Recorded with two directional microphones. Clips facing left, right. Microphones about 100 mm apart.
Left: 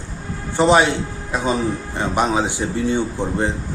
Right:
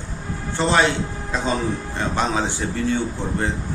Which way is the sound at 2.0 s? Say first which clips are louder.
Left 4 dB; 15° left (ahead or behind).